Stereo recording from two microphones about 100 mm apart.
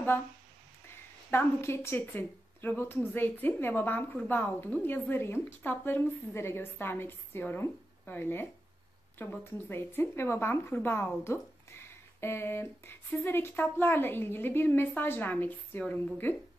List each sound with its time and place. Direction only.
1.3 s a woman's voice: 25° left (ahead or behind)